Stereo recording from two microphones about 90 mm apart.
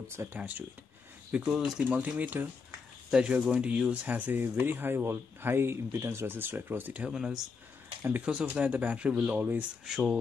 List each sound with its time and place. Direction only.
0.1 s speech: 30° right (ahead or behind)
0.4 s speech: 15° right (ahead or behind)
1.5 s speech: 5° right (ahead or behind)
1.9 s speech: 15° right (ahead or behind)
7.1 s speech: 5° right (ahead or behind)
9.8 s speech: 5° right (ahead or behind)